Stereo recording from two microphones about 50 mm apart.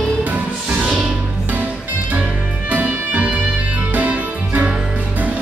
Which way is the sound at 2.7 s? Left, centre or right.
Right.